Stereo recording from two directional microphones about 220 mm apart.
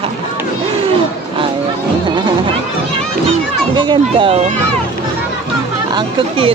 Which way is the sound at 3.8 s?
20° right (ahead or behind).